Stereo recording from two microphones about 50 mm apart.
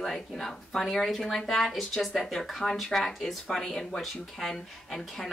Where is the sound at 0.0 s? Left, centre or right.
Centre.